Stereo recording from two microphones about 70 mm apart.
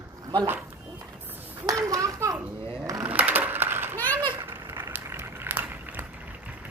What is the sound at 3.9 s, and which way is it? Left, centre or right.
Children playing, left.